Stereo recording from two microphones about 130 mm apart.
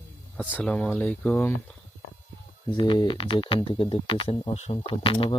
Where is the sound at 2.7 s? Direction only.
35° left (ahead or behind).